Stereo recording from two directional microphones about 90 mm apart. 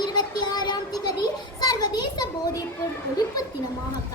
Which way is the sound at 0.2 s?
50° left (ahead or behind).